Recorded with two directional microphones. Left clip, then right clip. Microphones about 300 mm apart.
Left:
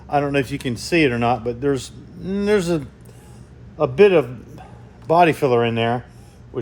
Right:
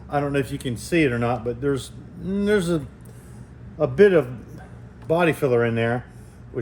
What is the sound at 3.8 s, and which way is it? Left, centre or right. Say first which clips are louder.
Speech: left 2 dB; centre.